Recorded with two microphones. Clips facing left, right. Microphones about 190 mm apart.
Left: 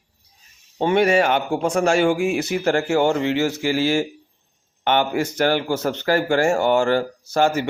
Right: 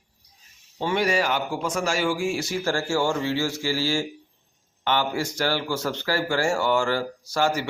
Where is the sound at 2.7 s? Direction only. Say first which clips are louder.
Left 6 dB; 60° left (ahead or behind).